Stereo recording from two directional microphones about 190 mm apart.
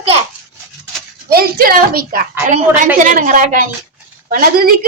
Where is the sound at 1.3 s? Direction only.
50° right (ahead or behind).